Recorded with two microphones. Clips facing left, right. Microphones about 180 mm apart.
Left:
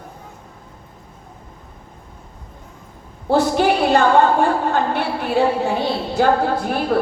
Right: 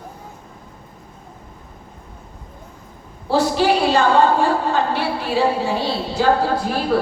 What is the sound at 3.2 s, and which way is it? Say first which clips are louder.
A woman's voice: left 1 dB; 55° left (ahead or behind).